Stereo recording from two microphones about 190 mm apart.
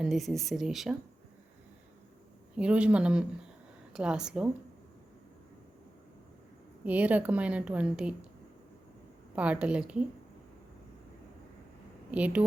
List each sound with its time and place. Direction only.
0.0 s speech: centre (ahead or behind)
2.6 s speech: 5° right (ahead or behind)
6.8 s a woman's voice: 10° right (ahead or behind)
9.3 s a woman's voice: 5° right (ahead or behind)
12.1 s a woman's voice: 5° right (ahead or behind)